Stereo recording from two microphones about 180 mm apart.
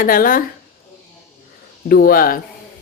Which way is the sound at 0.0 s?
50° left (ahead or behind).